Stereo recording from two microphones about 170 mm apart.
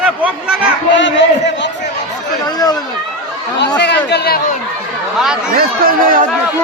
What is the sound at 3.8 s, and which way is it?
Speech, 90° left.